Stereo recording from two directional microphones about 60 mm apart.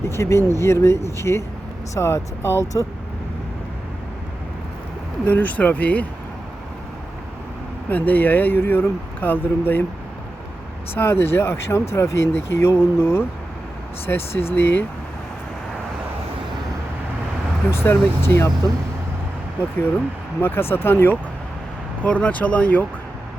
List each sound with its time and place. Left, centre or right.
0.0 s speech: left
5.3 s speech: left
7.9 s speech: left
10.9 s speech: left
17.7 s speech: left
20.4 s speech: left
22.0 s speech: left